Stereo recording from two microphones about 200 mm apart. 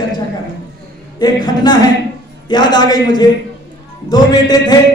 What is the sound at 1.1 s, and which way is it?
A man's voice, 20° left (ahead or behind).